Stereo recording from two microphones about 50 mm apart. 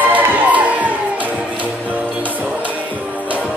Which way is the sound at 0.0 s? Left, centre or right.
Right.